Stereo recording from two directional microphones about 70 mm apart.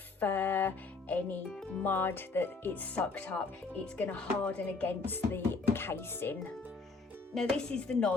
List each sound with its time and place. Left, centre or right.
0.2 s music: left
1.8 s speech: left
5.0 s music: left
7.3 s chopping: centre